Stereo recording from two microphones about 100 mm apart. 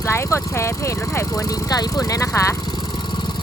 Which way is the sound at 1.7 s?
40° left (ahead or behind).